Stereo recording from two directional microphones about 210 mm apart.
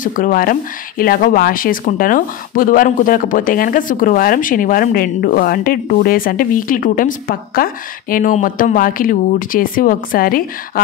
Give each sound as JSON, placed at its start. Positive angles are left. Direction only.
{"t": 0.0, "sound": "speech", "side_deg": 40}